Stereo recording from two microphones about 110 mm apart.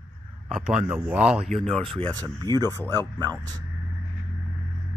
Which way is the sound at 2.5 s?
40° right (ahead or behind).